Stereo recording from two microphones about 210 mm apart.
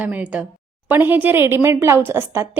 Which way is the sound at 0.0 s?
5° right (ahead or behind).